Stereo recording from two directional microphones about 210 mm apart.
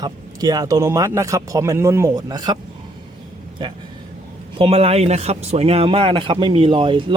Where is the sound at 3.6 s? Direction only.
20° right (ahead or behind).